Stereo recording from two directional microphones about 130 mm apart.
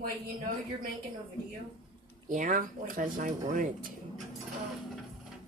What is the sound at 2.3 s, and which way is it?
A woman's voice, 85° right.